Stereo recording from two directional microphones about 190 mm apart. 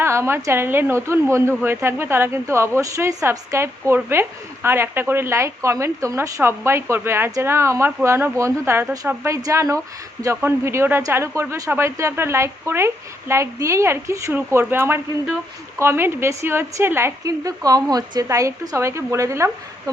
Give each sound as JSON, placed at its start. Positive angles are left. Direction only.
{"t": 0.0, "sound": "a woman's voice", "side_deg": -15}